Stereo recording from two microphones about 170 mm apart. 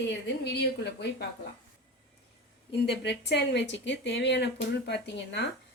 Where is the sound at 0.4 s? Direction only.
80° left.